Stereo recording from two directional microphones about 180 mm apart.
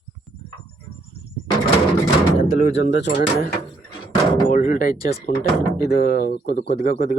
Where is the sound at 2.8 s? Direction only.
75° left (ahead or behind).